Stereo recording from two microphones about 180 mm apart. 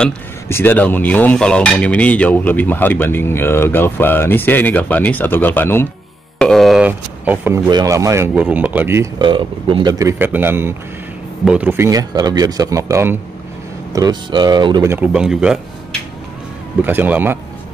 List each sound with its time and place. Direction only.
0.0 s speech: 10° left (ahead or behind)
6.3 s a sound: 5° left (ahead or behind)
7.7 s speech: 20° right (ahead or behind)
9.2 s speech: 25° right (ahead or behind)
14.9 s speech: 5° right (ahead or behind)
16.8 s speech: 10° right (ahead or behind)